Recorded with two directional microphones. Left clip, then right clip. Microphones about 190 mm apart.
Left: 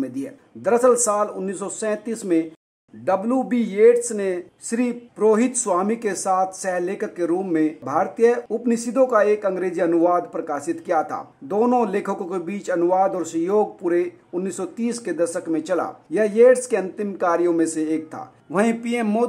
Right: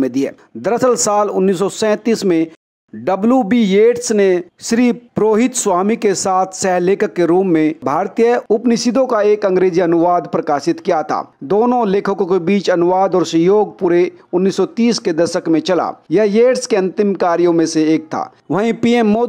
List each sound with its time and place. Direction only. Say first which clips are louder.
0.0 s speech: right 12 dB; 35° right (ahead or behind)
18.5 s speech: right 6 dB; 45° right (ahead or behind)